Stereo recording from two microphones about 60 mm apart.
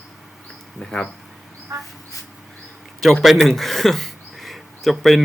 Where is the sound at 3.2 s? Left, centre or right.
Centre.